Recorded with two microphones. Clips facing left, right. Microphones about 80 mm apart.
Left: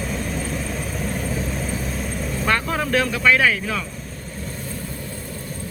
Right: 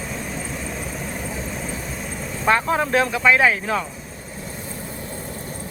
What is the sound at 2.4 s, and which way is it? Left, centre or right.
Speech, centre.